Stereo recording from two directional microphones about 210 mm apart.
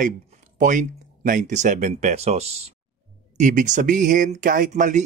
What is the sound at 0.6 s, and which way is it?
Speech, 40° right (ahead or behind).